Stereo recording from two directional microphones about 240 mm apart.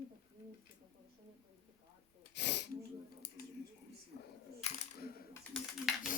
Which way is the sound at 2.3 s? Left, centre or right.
Left.